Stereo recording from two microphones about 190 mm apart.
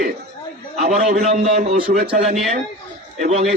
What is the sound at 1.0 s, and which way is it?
Speech, 45° right (ahead or behind).